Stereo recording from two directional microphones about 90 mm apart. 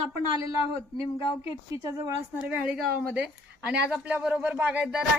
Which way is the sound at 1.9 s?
35° right (ahead or behind).